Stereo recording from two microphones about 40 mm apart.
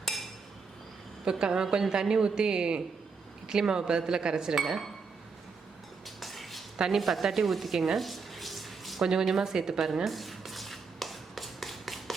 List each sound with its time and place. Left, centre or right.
0.0 s chink: centre
1.2 s speech: centre
4.5 s speech: centre
6.1 s a sound: centre
6.9 s speech: centre
9.0 s speech: centre
9.8 s a sound: centre